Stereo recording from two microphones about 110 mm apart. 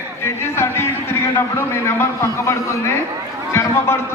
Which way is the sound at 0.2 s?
25° left (ahead or behind).